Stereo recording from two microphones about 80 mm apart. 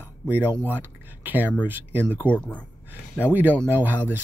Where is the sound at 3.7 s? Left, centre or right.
Right.